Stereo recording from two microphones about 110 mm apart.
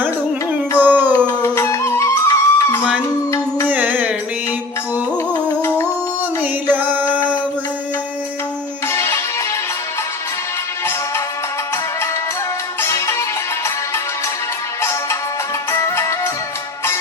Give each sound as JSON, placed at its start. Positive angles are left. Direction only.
{"t": 0.8, "sound": "a sound", "side_deg": -15}
{"t": 1.3, "sound": "music", "side_deg": 25}
{"t": 3.7, "sound": "music", "side_deg": -15}
{"t": 5.6, "sound": "music", "side_deg": 30}
{"t": 6.4, "sound": "music", "side_deg": -15}
{"t": 8.9, "sound": "music", "side_deg": 25}
{"t": 12.8, "sound": "music", "side_deg": 25}
{"t": 15.7, "sound": "music", "side_deg": 25}